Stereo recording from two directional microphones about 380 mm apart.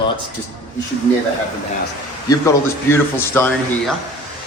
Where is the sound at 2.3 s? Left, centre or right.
Centre.